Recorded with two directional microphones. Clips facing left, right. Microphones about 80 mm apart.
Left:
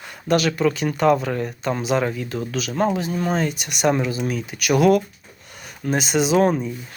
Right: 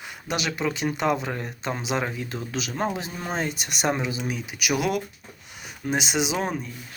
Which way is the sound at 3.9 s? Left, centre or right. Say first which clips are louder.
Left 6 dB; centre.